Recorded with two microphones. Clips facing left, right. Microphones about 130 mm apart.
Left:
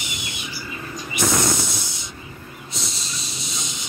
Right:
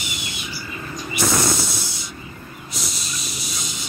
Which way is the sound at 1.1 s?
20° left (ahead or behind).